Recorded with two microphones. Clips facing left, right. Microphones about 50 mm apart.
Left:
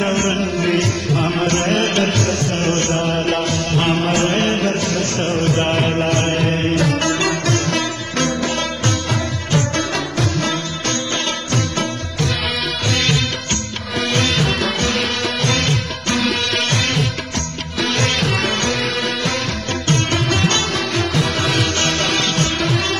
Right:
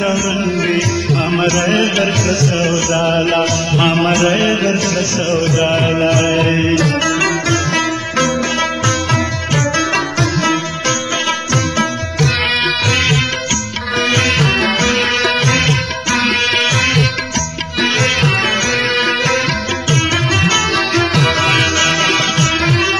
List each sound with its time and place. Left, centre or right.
0.4 s music: right
2.2 s music: right
2.9 s a sound: right
4.1 s mantra: right
4.6 s a sound: right
6.0 s music: right
11.5 s music: right
18.7 s music: right
19.9 s music: right
20.7 s music: right
21.5 s music: right
22.6 s music: right